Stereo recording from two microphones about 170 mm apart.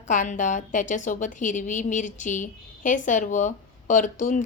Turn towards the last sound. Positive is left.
turn(degrees=45)  # may be behind; listen again after turning